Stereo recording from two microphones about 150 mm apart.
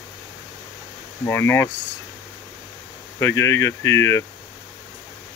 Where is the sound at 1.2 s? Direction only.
15° left (ahead or behind).